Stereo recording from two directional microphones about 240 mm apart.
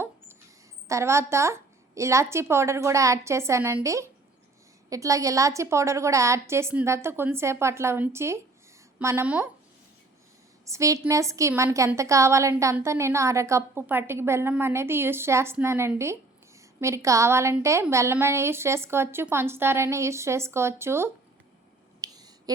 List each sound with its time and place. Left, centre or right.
0.9 s a woman's voice: centre
10.7 s a woman's voice: centre
22.0 s a sound: centre